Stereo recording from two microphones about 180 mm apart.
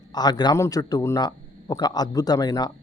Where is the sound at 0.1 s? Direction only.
25° left (ahead or behind).